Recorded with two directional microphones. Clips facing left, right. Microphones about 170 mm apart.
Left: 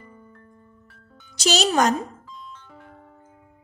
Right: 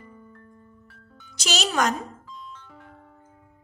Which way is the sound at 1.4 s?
35° left (ahead or behind).